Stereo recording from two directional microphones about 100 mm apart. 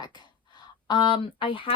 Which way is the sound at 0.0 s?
45° left (ahead or behind).